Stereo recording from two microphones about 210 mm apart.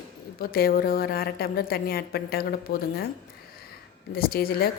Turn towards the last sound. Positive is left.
turn(degrees=45)  # may be behind; listen again after turning